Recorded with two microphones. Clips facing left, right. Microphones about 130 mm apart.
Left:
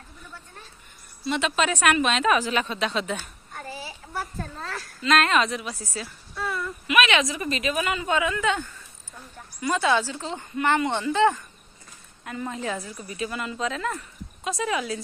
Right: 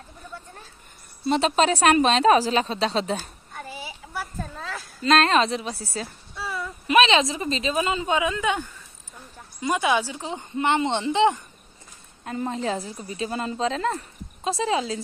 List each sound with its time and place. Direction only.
1.2 s a woman's voice: 35° right (ahead or behind)
3.8 s a sound: 10° right (ahead or behind)
5.0 s a woman's voice: 30° right (ahead or behind)
6.3 s a sound: 5° right (ahead or behind)
6.9 s a woman's voice: 30° right (ahead or behind)
12.3 s a woman's voice: 30° right (ahead or behind)